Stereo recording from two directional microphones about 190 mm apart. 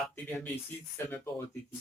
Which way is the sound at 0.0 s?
10° left (ahead or behind).